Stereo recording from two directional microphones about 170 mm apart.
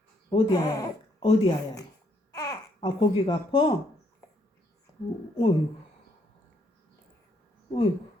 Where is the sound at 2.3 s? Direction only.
20° left (ahead or behind).